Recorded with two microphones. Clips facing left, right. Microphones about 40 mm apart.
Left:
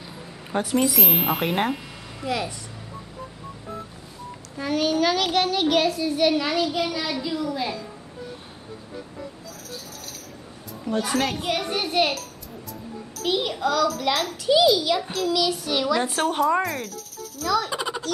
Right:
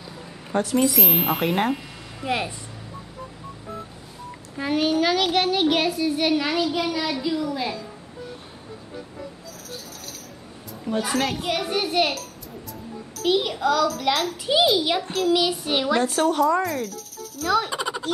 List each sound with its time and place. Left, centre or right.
0.5 s speech: centre
2.2 s child singing: right
4.6 s a child's voice: centre
8.9 s music: centre
10.7 s a child's voice: centre
14.4 s child singing: centre
15.0 s speech: centre
15.3 s child singing: right
16.3 s speech: left
16.6 s speech: centre
17.6 s a sound: centre